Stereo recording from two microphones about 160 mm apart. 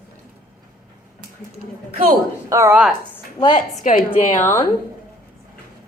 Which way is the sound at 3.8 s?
55° left (ahead or behind).